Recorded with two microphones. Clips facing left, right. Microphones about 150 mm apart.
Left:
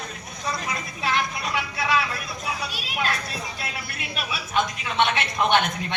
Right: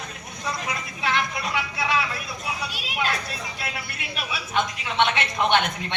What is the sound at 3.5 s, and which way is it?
A woman's voice, 25° right (ahead or behind).